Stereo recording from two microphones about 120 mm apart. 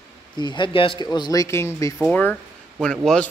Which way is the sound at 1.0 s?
35° left (ahead or behind).